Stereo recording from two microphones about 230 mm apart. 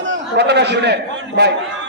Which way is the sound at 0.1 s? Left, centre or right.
Right.